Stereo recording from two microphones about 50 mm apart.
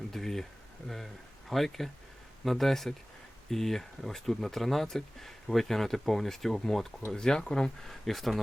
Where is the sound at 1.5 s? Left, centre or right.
Centre.